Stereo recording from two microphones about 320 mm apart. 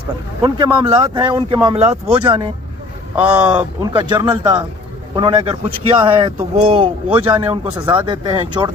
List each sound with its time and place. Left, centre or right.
0.4 s speech: centre